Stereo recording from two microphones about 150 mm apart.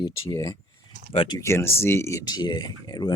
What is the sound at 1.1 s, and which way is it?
Speech, 35° left (ahead or behind).